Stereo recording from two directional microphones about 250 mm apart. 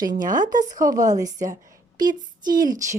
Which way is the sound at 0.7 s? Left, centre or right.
Centre.